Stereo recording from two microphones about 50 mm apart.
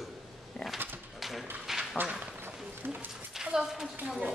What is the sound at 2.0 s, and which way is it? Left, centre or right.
Speech, right.